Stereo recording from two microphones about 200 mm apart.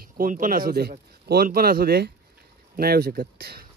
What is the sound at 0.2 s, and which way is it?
Speech, 45° right (ahead or behind).